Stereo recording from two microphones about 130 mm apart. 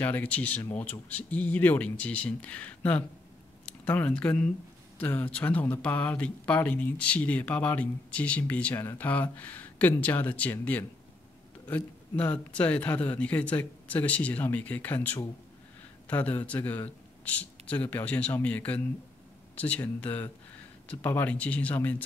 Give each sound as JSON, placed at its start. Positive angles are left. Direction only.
{"t": 0.0, "sound": "speech", "side_deg": 10}